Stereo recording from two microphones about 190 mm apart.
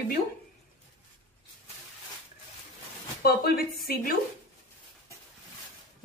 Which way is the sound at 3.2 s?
55° left (ahead or behind).